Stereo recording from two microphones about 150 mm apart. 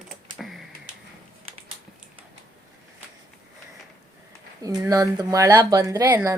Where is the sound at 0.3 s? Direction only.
Centre (ahead or behind).